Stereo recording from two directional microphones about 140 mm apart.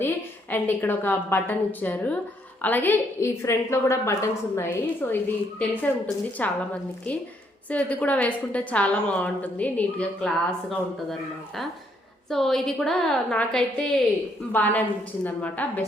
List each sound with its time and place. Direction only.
0.0 s a woman's voice: 15° left (ahead or behind)
7.7 s a woman's voice: 10° left (ahead or behind)
12.3 s a woman's voice: centre (ahead or behind)